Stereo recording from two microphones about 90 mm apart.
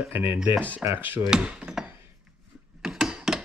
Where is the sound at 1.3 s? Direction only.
10° right (ahead or behind).